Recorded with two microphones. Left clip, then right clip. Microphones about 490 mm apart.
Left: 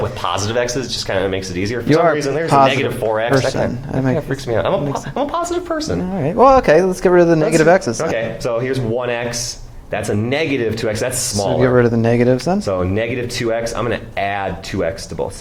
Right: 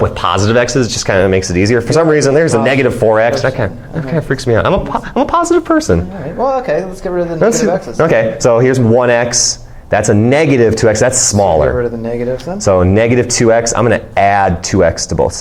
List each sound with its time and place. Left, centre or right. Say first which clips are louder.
0.2 s speech: right 6 dB; right
6.4 s speech: left 4 dB; left
7.9 s speech: right 9 dB; right
11.8 s speech: left 2 dB; left
12.6 s speech: right 9 dB; right